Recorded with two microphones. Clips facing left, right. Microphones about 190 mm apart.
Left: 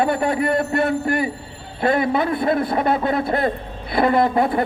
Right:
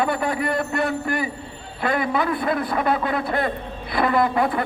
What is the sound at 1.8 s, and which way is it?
A man's voice, 25° left (ahead or behind).